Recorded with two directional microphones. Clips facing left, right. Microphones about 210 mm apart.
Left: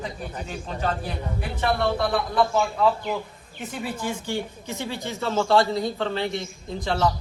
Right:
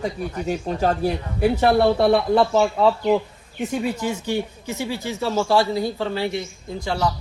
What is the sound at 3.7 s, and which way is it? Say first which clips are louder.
Speech: right 5 dB; 15° right (ahead or behind).